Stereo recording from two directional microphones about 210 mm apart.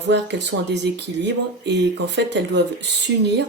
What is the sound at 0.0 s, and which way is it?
Speech, 55° right (ahead or behind).